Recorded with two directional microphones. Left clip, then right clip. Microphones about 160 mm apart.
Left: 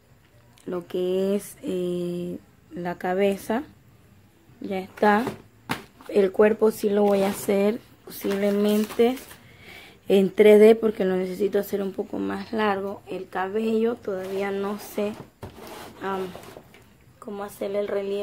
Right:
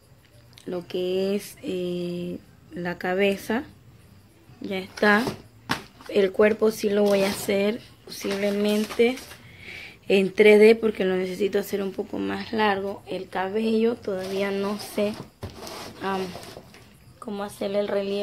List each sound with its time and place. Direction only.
0.7 s a woman's voice: 20° left (ahead or behind)
7.4 s a woman's voice: 30° left (ahead or behind); by 18.2 s 5° right (ahead or behind)